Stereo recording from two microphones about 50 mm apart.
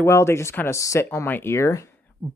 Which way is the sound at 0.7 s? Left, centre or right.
Left.